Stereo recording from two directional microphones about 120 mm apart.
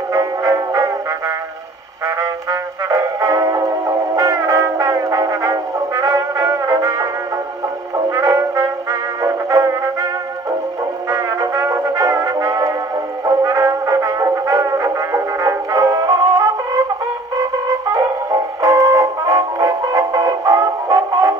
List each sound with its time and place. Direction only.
0.1 s music: 30° right (ahead or behind)
2.9 s music: 30° right (ahead or behind)
8.1 s music: 25° right (ahead or behind)
11.1 s music: 25° right (ahead or behind)
17.9 s music: 30° right (ahead or behind)